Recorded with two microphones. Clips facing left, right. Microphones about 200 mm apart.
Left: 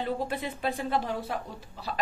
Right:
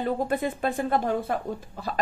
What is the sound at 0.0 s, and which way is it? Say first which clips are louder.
A woman's voice: right 5 dB; 50° right (ahead or behind).